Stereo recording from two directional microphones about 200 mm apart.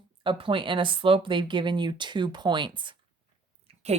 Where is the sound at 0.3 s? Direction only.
25° right (ahead or behind).